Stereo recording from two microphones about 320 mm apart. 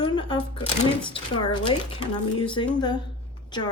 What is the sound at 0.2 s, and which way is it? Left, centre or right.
Speech, centre.